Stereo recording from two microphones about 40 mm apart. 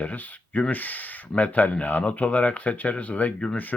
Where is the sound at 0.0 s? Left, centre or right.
Left.